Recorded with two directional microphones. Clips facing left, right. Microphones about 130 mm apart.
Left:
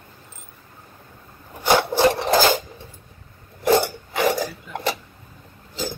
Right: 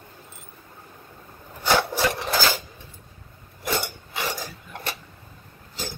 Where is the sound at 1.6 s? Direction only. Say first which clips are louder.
Left 5 dB; 30° left (ahead or behind).